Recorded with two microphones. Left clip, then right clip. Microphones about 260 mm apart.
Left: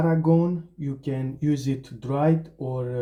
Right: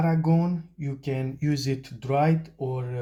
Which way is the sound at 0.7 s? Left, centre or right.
Right.